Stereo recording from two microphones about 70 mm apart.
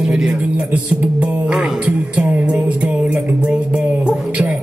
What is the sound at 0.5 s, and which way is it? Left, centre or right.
Music, centre.